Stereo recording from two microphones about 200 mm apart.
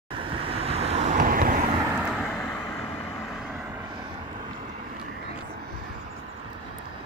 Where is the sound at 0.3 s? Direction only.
30° right (ahead or behind).